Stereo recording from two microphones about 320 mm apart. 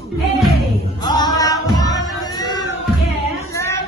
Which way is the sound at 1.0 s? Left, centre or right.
Centre.